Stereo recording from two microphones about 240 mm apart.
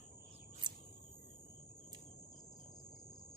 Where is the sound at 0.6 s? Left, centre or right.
Centre.